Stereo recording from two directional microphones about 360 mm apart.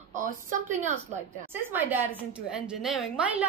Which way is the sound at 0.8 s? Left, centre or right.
Centre.